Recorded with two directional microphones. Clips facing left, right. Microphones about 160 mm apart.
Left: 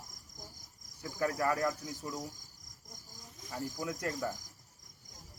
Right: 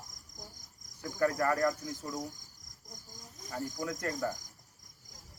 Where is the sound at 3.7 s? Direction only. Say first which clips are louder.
Right 1 dB; 10° left (ahead or behind).